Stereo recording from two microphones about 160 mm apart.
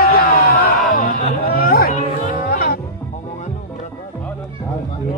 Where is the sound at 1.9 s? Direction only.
50° left (ahead or behind).